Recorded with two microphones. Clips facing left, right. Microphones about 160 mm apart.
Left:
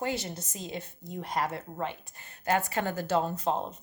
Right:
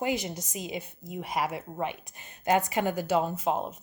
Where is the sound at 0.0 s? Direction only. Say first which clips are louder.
Right 3 dB; 15° right (ahead or behind).